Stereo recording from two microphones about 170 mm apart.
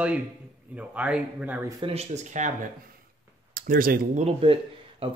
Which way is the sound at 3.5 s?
55° right (ahead or behind).